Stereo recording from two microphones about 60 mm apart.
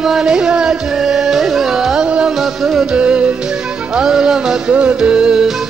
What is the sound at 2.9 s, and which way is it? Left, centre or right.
Music, centre.